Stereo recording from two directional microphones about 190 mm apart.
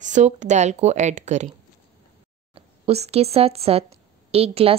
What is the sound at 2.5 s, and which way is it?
A woman's voice, 30° right (ahead or behind).